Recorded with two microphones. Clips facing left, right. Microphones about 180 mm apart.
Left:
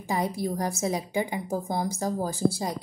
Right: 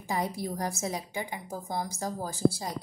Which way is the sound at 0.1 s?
20° left (ahead or behind).